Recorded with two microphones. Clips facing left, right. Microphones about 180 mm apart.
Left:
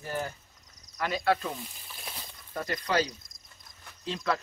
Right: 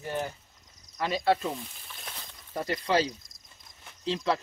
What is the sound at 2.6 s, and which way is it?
Speech, 30° right (ahead or behind).